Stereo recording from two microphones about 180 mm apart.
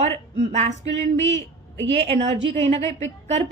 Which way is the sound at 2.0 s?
35° right (ahead or behind).